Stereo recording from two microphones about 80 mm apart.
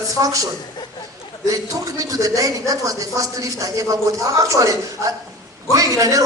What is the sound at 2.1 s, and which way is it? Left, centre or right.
A man's voice, right.